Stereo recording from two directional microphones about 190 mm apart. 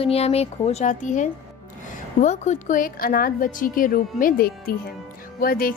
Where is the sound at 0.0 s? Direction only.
30° left (ahead or behind).